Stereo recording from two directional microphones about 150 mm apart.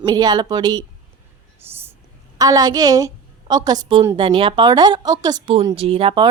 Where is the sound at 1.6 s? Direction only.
15° right (ahead or behind).